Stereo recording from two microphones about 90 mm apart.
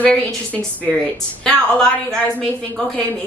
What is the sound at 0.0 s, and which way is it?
A woman's voice, 10° left (ahead or behind).